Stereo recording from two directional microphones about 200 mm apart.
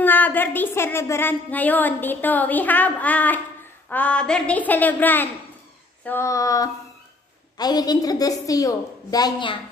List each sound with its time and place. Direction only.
0.0 s a woman's voice: 10° left (ahead or behind)